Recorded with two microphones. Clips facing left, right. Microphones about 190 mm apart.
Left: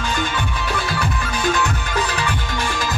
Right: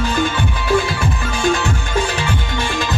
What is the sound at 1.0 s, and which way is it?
Music, 25° right (ahead or behind).